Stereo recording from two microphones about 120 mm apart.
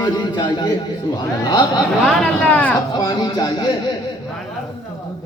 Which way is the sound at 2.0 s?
10° left (ahead or behind).